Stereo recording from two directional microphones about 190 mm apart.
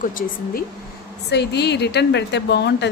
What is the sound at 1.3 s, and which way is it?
A woman's voice, 60° left (ahead or behind).